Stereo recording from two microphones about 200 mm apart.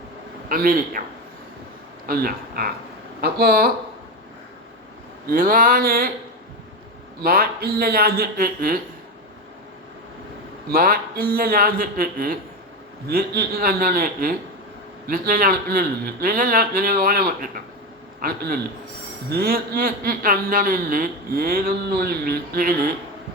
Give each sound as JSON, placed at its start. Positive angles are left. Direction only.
{"t": 0.4, "sound": "a man's voice", "side_deg": -45}
{"t": 2.0, "sound": "a man's voice", "side_deg": -50}
{"t": 5.3, "sound": "a man's voice", "side_deg": -45}
{"t": 7.2, "sound": "a man's voice", "side_deg": -50}
{"t": 10.7, "sound": "a man's voice", "side_deg": -45}